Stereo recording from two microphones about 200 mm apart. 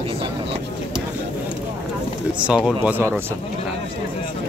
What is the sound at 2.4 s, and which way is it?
Speech, 5° right (ahead or behind).